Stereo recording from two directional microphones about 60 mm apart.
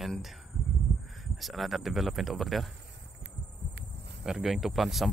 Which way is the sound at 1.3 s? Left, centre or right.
Centre.